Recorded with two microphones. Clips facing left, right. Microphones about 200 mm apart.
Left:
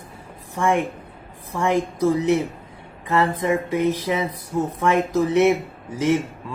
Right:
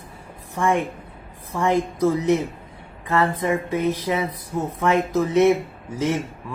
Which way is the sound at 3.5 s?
15° left (ahead or behind).